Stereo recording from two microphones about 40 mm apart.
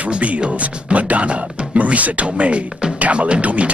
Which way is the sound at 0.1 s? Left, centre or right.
Right.